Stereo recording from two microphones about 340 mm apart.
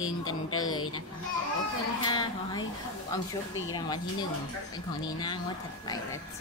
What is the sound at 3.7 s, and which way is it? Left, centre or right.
A woman's voice, centre.